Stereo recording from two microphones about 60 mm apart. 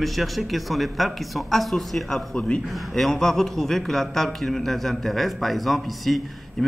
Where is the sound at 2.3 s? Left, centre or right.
Centre.